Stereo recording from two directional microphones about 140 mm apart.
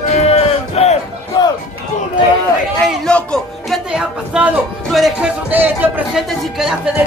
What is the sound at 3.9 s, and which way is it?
Speech, 5° right (ahead or behind).